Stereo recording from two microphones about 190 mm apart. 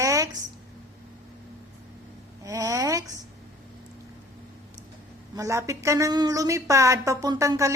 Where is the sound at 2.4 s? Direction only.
15° right (ahead or behind).